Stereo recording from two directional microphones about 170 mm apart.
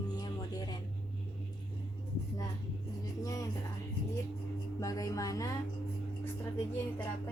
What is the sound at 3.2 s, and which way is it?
Speech, 20° left (ahead or behind).